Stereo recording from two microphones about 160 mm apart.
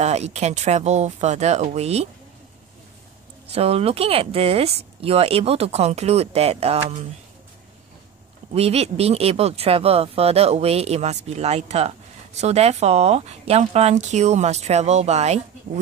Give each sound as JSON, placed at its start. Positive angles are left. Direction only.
{"t": 0.0, "sound": "speech", "side_deg": -45}
{"t": 3.4, "sound": "speech", "side_deg": -40}
{"t": 8.5, "sound": "speech", "side_deg": -40}